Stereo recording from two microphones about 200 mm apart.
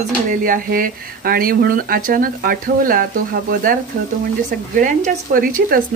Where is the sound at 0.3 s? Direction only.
45° right (ahead or behind).